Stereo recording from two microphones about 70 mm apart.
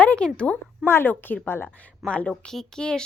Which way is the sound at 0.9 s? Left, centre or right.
Left.